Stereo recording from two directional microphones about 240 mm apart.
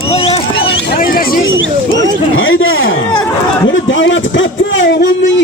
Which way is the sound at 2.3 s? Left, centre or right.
Left.